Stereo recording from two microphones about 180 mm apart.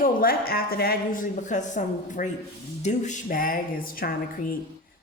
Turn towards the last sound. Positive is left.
turn(degrees=55)  # may be behind; listen again after turning